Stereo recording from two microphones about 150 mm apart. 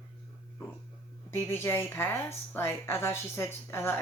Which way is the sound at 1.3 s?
15° left (ahead or behind).